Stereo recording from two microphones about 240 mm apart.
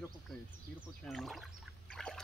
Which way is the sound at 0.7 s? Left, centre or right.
Centre.